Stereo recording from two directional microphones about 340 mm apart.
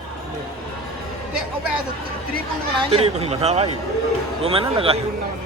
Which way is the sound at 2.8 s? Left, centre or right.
Centre.